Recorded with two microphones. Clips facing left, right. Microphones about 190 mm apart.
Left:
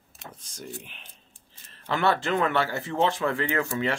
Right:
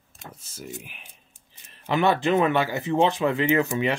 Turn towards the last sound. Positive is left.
turn(degrees=-20)  # may be behind; listen again after turning